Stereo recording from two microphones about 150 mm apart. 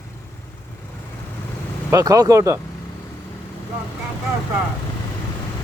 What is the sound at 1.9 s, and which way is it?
Speech, 25° right (ahead or behind).